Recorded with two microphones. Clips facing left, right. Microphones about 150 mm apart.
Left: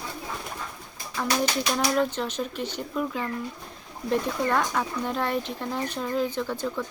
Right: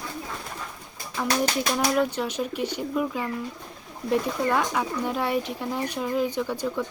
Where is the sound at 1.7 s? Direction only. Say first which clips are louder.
Right 1 dB; 10° right (ahead or behind).